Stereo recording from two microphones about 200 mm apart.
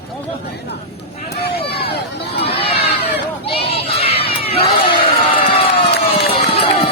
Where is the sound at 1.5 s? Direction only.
50° left (ahead or behind).